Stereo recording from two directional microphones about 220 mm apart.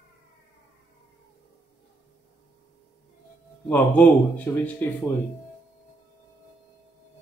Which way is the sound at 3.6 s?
5° left (ahead or behind).